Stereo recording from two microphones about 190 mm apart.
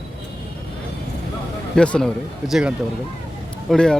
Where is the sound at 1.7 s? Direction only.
5° left (ahead or behind).